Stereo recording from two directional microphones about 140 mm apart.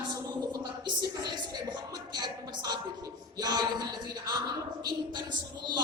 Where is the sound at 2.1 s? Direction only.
30° right (ahead or behind).